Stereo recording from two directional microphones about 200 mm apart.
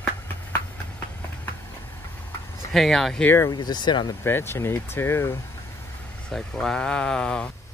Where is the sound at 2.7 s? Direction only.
Centre (ahead or behind); by 4.1 s 20° left (ahead or behind).